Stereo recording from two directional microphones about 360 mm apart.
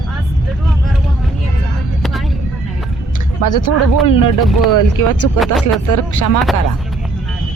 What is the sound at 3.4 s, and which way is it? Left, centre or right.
Speech, left.